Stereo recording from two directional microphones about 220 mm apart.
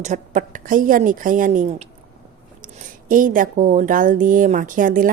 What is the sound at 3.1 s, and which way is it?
Speech, 40° right (ahead or behind).